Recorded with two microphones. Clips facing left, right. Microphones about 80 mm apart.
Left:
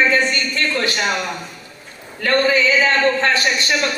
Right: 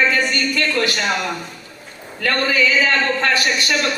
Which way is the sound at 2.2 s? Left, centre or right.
Left.